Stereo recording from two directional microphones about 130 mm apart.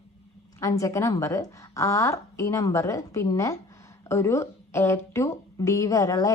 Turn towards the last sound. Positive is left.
turn(degrees=25)  # may be behind; listen again after turning